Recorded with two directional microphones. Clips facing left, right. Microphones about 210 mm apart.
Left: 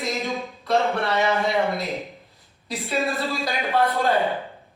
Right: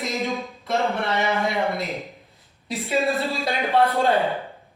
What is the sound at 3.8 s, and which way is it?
Speech, 30° right (ahead or behind).